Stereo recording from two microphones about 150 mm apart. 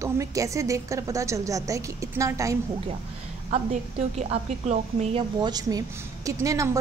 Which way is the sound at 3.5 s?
50° right (ahead or behind).